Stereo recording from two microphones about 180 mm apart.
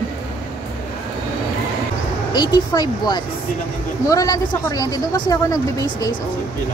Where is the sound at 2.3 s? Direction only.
25° left (ahead or behind).